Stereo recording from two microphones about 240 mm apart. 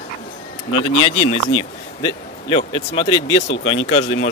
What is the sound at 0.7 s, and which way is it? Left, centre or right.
Speech, left.